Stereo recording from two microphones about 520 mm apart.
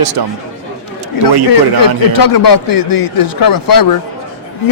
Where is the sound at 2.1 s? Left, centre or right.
Left.